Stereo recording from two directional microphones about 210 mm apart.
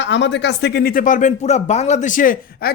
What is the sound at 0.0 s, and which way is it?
Speech, 60° left (ahead or behind).